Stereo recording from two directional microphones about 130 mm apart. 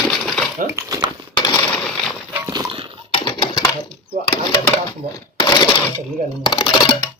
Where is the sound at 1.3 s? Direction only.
30° left (ahead or behind).